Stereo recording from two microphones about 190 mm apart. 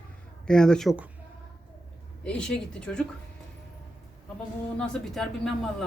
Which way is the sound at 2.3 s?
5° left (ahead or behind).